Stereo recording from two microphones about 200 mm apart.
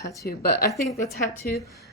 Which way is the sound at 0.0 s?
15° left (ahead or behind).